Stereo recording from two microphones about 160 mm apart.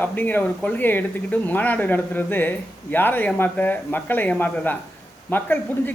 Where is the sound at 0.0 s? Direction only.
10° left (ahead or behind).